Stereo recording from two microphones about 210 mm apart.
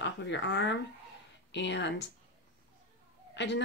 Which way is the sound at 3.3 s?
55° left (ahead or behind).